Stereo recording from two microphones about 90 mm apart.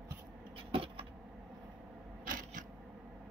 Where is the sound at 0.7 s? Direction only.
90° right.